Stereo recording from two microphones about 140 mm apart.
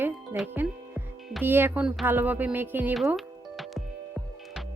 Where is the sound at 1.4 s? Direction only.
15° right (ahead or behind).